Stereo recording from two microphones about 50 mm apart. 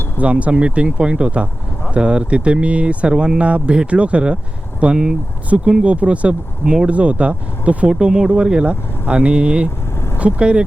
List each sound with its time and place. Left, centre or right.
0.2 s speech: right
7.9 s speech: centre